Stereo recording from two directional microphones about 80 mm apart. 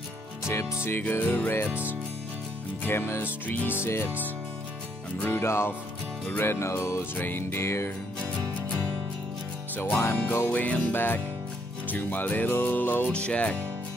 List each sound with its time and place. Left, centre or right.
0.8 s music: left
1.7 s music: centre
2.8 s music: left
5.2 s music: left
7.2 s music: left
9.8 s music: left
13.1 s speech: centre